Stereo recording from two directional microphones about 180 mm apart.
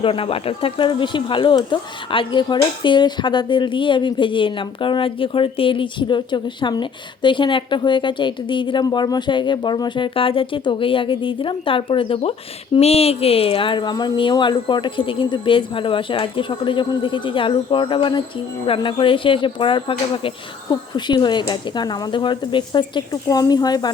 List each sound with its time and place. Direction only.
0.0 s speech: 30° left (ahead or behind)